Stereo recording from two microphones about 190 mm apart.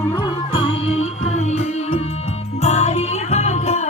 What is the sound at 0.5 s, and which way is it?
Music, 30° left (ahead or behind).